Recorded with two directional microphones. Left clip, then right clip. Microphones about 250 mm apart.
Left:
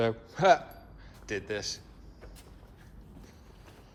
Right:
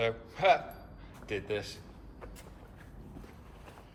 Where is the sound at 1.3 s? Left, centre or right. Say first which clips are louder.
Left 1 dB; left.